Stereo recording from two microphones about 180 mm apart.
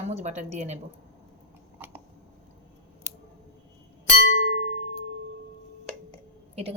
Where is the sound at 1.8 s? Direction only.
10° right (ahead or behind).